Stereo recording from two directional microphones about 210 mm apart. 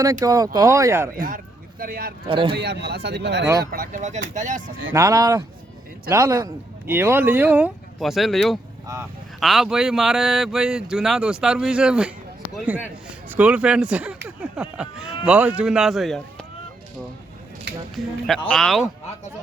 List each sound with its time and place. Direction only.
0.0 s a man's voice: 15° right (ahead or behind)
1.1 s speech: 40° right (ahead or behind)
2.2 s a man's voice: 25° right (ahead or behind)
2.6 s speech: 50° right (ahead or behind)
3.7 s speech: 40° right (ahead or behind)
4.9 s a man's voice: 15° right (ahead or behind)
17.9 s speech: centre (ahead or behind)